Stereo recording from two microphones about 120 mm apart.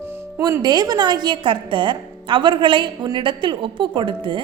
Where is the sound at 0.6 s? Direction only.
35° right (ahead or behind).